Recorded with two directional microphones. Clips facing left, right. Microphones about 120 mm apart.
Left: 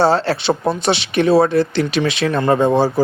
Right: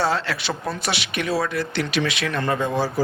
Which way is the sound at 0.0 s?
30° left (ahead or behind).